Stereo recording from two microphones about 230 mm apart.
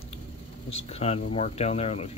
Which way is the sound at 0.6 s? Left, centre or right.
Left.